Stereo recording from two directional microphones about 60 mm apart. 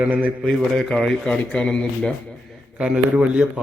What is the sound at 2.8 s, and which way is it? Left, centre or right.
Speech, centre.